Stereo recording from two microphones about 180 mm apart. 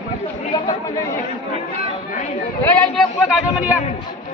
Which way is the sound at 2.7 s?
5° left (ahead or behind).